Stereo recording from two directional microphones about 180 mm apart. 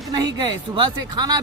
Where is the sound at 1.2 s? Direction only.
20° right (ahead or behind).